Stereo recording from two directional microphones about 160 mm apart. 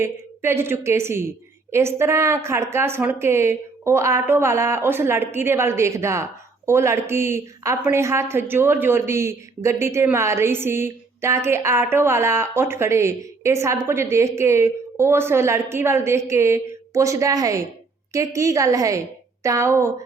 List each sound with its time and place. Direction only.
0.0 s a woman's voice: 15° right (ahead or behind)